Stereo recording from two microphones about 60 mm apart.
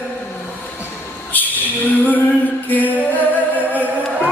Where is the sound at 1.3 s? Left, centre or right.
Left.